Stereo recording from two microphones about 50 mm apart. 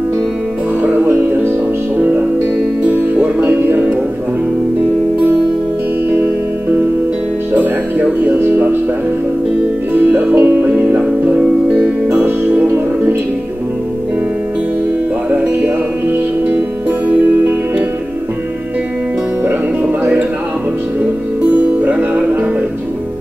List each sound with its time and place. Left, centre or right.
1.0 s music: right
8.2 s music: right
10.1 s music: right
12.3 s music: right
19.4 s music: right
21.5 s music: right